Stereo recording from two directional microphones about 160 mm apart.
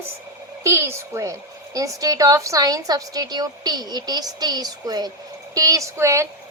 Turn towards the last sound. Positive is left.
turn(degrees=-20)  # may be behind; listen again after turning